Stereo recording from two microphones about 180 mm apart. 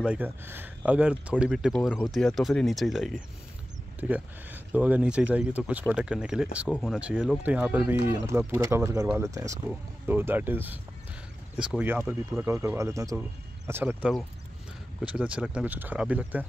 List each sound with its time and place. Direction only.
0.0 s speech: 10° right (ahead or behind)